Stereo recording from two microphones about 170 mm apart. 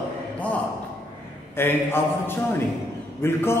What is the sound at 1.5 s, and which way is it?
A man's voice, 15° left (ahead or behind).